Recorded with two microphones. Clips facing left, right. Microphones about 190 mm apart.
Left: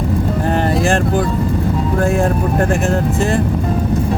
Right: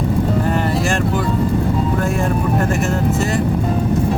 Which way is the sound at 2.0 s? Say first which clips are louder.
Left 3 dB; 45° left (ahead or behind).